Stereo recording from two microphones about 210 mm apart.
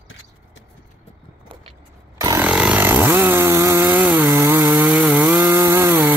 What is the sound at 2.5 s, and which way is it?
Chainsaw, 5° right (ahead or behind).